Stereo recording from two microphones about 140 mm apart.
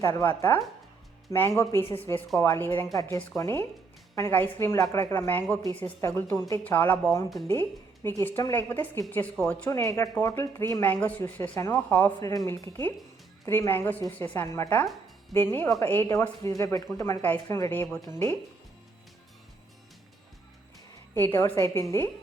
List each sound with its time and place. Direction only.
0.0 s a woman's voice: 20° left (ahead or behind)
21.2 s speech: 15° left (ahead or behind)